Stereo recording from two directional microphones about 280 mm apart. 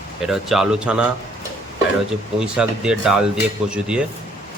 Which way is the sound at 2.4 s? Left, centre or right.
Centre.